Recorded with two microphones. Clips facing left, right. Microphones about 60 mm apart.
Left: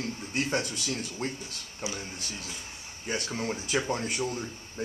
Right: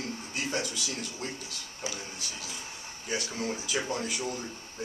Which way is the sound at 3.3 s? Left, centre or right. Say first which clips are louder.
Left 5 dB; left.